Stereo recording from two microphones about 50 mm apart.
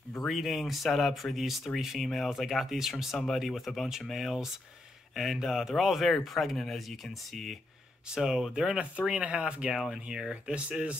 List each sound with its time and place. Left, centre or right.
0.2 s speech: centre
8.1 s speech: centre
8.7 s speech: right